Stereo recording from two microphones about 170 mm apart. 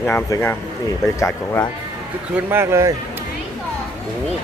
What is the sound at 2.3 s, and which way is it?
Speech, 15° right (ahead or behind).